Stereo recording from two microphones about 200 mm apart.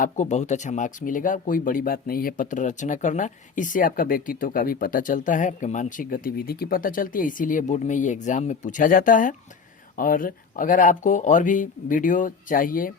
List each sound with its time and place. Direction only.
0.0 s speech: 35° left (ahead or behind)